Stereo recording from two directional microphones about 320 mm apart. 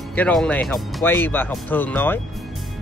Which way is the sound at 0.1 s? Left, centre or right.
Centre.